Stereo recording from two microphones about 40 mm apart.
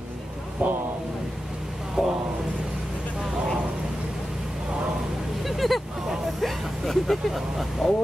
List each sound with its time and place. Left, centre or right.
0.6 s speech: right
2.0 s speech: centre
5.4 s a sound: centre
6.4 s speech: centre